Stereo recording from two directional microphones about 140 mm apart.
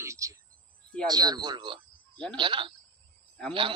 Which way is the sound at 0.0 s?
20° right (ahead or behind).